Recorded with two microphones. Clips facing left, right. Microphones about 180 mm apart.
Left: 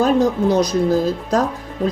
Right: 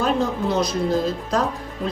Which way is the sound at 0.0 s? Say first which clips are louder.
Left 6 dB; 40° left (ahead or behind).